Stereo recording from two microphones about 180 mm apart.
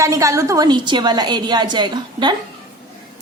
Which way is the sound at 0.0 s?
15° right (ahead or behind).